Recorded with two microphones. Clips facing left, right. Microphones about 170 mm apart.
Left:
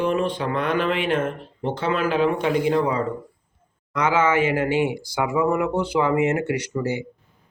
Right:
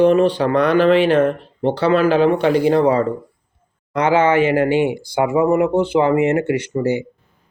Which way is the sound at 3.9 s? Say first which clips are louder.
Right 5 dB; 30° right (ahead or behind).